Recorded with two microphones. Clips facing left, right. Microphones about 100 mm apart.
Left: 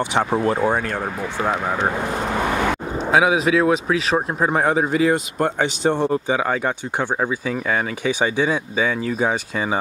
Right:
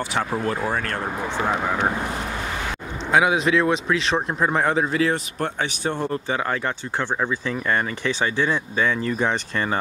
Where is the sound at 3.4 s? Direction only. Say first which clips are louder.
Left 3 dB; 5° left (ahead or behind).